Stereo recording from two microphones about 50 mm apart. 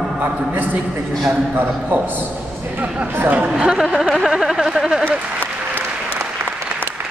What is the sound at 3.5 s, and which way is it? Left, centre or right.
Speech, centre.